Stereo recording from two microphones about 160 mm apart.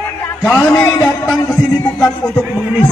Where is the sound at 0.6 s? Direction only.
5° left (ahead or behind).